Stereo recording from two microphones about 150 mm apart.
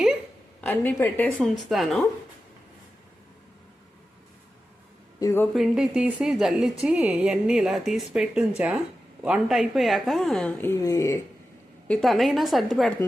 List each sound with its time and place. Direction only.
0.6 s a woman's voice: 10° left (ahead or behind)
1.5 s speech: centre (ahead or behind)
5.2 s a woman's voice: 15° left (ahead or behind)
5.5 s speech: 5° right (ahead or behind)
10.6 s a woman's voice: 20° left (ahead or behind)
11.9 s speech: 5° left (ahead or behind)